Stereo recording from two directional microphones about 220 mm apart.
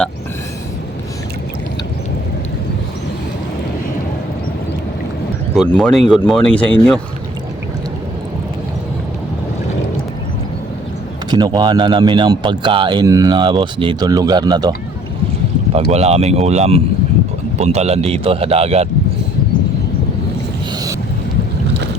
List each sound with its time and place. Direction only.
5.5 s speech: 5° left (ahead or behind)
11.3 s speech: 20° right (ahead or behind)
15.9 s speech: 30° right (ahead or behind)